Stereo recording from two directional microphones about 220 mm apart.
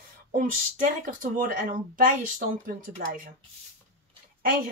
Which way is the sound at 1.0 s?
40° right (ahead or behind).